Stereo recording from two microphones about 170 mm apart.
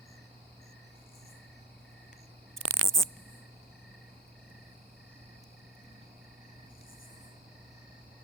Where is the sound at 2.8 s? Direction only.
15° right (ahead or behind).